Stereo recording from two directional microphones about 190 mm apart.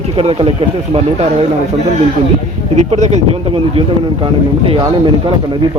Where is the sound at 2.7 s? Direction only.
35° right (ahead or behind).